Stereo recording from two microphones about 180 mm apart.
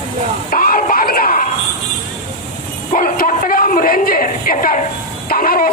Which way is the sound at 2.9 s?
50° left (ahead or behind).